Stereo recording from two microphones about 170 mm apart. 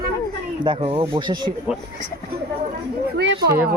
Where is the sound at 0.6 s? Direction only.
30° right (ahead or behind).